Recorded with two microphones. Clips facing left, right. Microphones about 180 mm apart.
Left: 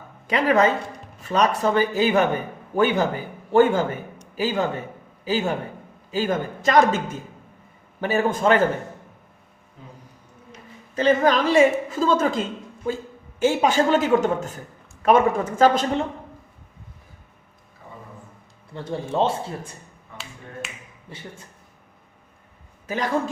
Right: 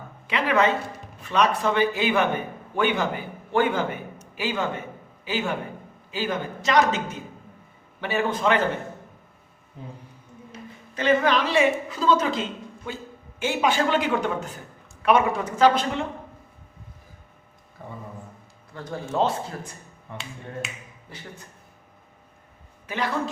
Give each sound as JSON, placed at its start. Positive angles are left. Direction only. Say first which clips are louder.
{"t": 0.3, "sound": "a man's voice", "louder": "left 3 dB", "side_deg": 40}
{"t": 8.0, "sound": "a man's voice", "louder": "left 4 dB", "side_deg": 45}
{"t": 10.9, "sound": "a woman's voice", "louder": "left 3 dB", "side_deg": 40}
{"t": 17.8, "sound": "a sound", "louder": "right 4 dB", "side_deg": -55}
{"t": 18.7, "sound": "a man's voice", "louder": "left 3 dB", "side_deg": 25}
{"t": 21.1, "sound": "a man's voice", "louder": "left 3 dB", "side_deg": 25}
{"t": 22.9, "sound": "a man's voice", "louder": "left 3 dB", "side_deg": 45}